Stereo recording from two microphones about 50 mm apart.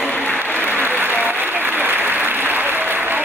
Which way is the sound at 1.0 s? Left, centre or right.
Right.